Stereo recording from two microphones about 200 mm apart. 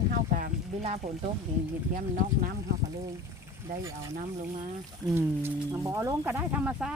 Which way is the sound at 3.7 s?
45° right (ahead or behind).